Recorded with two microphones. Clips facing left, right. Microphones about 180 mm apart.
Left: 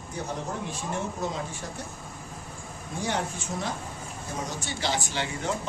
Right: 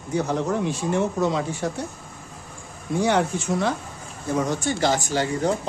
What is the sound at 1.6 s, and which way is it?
Speech, 75° right (ahead or behind).